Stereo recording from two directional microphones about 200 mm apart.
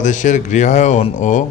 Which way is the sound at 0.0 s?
40° left (ahead or behind).